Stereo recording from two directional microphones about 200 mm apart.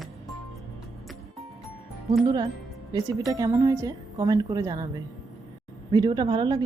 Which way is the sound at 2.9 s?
20° right (ahead or behind).